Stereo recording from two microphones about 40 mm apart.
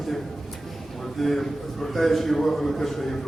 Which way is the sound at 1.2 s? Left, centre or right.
Centre.